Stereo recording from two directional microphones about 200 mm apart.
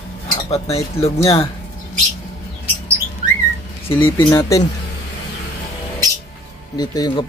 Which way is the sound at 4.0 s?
25° left (ahead or behind).